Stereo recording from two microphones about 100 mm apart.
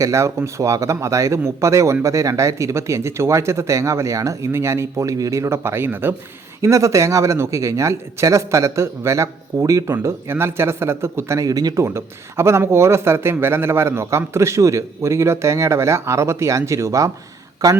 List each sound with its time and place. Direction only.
0.0 s speech: 30° right (ahead or behind)
11.4 s speech: 40° right (ahead or behind)